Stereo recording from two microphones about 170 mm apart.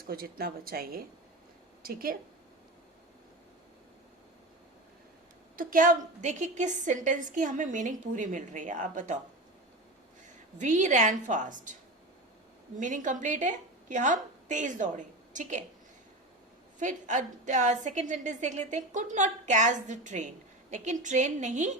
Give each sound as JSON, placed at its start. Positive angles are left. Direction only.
{"t": 0.1, "sound": "speech", "side_deg": -60}
{"t": 5.5, "sound": "a woman's voice", "side_deg": -55}
{"t": 10.6, "sound": "a woman's voice", "side_deg": -45}
{"t": 12.8, "sound": "a woman's voice", "side_deg": -50}
{"t": 16.8, "sound": "a woman's voice", "side_deg": -45}